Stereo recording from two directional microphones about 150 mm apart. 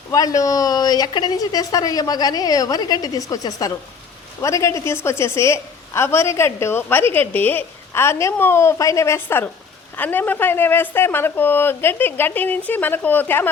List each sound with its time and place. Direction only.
0.1 s a woman's voice: 25° left (ahead or behind)